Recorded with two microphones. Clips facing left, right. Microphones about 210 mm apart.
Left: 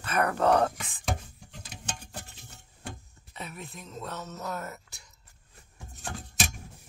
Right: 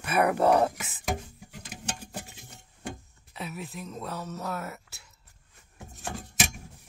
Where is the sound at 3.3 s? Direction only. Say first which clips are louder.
Right 4 dB; 5° right (ahead or behind).